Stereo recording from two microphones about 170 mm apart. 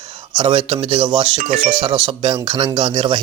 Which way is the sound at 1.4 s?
50° right (ahead or behind).